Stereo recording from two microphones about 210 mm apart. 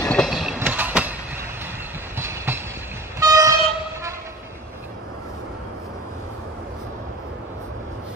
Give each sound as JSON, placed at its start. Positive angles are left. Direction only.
{"t": 0.0, "sound": "a sound", "side_deg": 5}
{"t": 0.6, "sound": "vehicle", "side_deg": -10}
{"t": 2.1, "sound": "train", "side_deg": -10}